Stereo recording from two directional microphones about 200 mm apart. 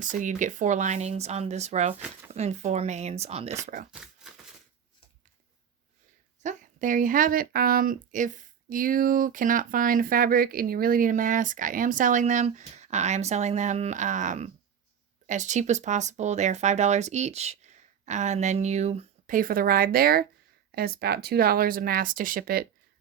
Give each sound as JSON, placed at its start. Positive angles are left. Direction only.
{"t": 0.0, "sound": "speech", "side_deg": -40}
{"t": 3.9, "sound": "a sound", "side_deg": 0}
{"t": 6.4, "sound": "speech", "side_deg": -40}